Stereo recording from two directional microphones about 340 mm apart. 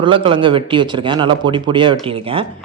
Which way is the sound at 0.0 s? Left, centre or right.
Centre.